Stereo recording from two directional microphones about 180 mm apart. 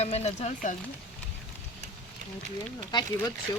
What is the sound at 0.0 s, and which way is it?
Speech, 35° left (ahead or behind).